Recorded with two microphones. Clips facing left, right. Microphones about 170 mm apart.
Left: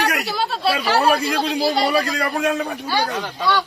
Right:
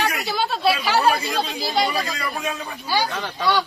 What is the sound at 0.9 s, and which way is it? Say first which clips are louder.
Speech: left 2 dB; 75° left (ahead or behind).